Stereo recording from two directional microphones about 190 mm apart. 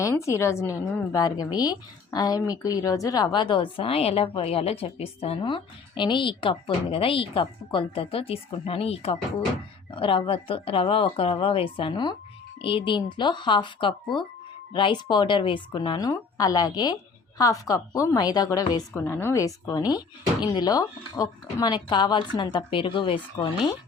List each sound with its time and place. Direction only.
0.0 s a woman's voice: 15° left (ahead or behind)